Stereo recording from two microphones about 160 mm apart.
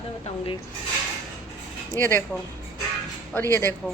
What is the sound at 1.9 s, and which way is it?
Speech, 15° left (ahead or behind).